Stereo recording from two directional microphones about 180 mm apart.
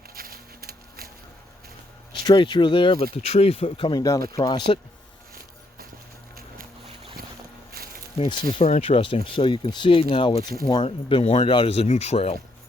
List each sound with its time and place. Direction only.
0.1 s a sound: 55° right (ahead or behind)
2.2 s speech: 25° left (ahead or behind)
8.3 s speech: 25° left (ahead or behind)